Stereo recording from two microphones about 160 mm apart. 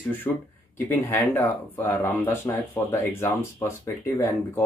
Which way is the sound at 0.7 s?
15° left (ahead or behind).